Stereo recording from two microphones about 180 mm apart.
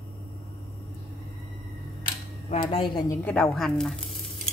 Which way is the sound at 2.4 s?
35° left (ahead or behind).